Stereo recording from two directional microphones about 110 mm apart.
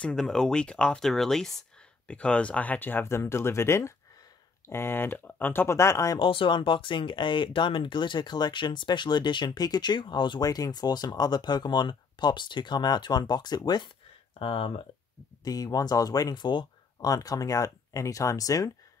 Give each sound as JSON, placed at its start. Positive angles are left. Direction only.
{"t": 0.0, "sound": "speech", "side_deg": 5}
{"t": 6.1, "sound": "speech", "side_deg": 50}
{"t": 14.4, "sound": "speech", "side_deg": 55}
{"t": 15.4, "sound": "speech", "side_deg": 35}